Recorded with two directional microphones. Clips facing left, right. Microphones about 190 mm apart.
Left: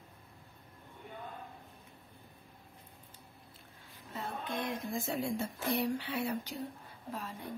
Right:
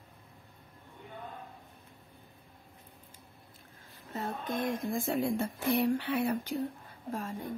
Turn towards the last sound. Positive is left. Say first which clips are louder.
# right 5 dB
turn(degrees=-45)  # may be behind; listen again after turning